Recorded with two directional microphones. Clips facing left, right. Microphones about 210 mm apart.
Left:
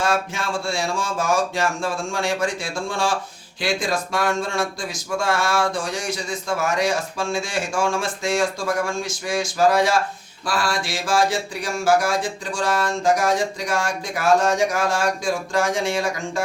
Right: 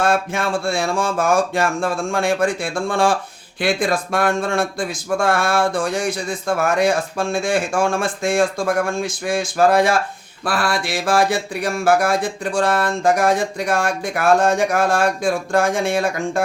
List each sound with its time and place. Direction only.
0.0 s speech: 55° right (ahead or behind)